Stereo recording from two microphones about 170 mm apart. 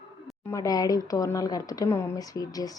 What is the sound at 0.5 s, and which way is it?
Speech, 20° left (ahead or behind).